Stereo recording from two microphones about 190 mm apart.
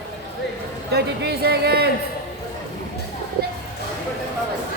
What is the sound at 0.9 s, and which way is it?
Speech, 60° right (ahead or behind).